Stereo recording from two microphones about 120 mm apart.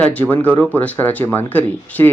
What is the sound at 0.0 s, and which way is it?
Speech, 15° left (ahead or behind).